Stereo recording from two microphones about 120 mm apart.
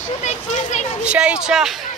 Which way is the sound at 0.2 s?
80° left.